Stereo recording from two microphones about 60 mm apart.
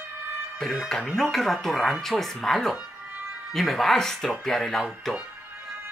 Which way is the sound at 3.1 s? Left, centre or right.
Right.